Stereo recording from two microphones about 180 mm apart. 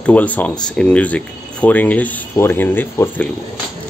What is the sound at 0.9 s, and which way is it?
Speech, 5° left (ahead or behind).